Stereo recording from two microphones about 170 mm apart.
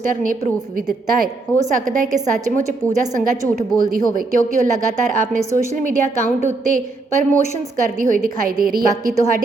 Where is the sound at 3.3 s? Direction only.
50° right (ahead or behind).